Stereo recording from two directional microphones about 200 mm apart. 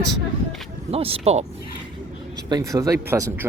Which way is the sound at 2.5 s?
15° right (ahead or behind).